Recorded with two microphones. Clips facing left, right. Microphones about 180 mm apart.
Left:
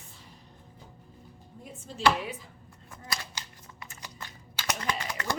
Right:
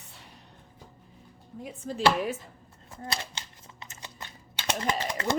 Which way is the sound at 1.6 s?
85° right.